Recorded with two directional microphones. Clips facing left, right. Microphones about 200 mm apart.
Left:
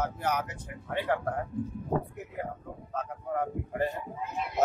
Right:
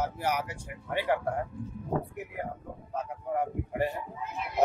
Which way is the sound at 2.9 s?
10° right (ahead or behind).